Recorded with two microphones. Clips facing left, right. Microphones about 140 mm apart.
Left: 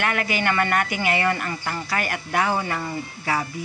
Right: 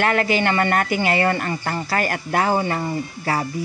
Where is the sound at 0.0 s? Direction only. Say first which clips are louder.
Right 5 dB; 35° right (ahead or behind).